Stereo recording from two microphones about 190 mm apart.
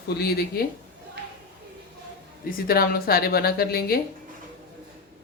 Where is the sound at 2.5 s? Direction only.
50° left (ahead or behind).